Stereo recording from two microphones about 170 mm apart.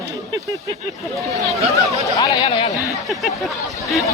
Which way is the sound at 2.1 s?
25° left (ahead or behind).